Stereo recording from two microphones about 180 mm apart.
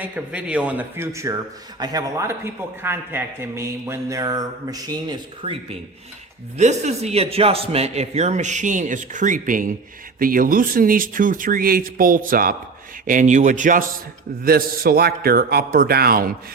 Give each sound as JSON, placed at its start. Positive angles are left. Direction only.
{"t": 0.0, "sound": "a man's voice", "side_deg": -5}
{"t": 6.6, "sound": "a man's voice", "side_deg": -40}